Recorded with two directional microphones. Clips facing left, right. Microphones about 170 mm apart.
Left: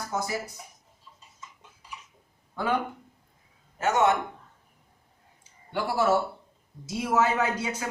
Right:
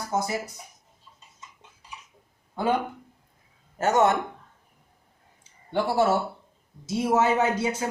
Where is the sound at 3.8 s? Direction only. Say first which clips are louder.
Right 2 dB; 40° right (ahead or behind).